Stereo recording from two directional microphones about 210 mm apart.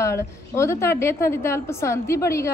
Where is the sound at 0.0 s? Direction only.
15° left (ahead or behind).